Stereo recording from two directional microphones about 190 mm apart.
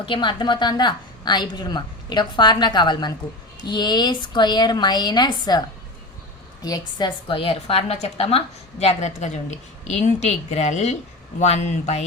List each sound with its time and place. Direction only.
0.0 s a woman's voice: 25° left (ahead or behind)